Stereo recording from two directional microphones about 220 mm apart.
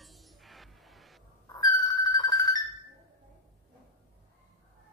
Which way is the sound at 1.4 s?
20° left (ahead or behind).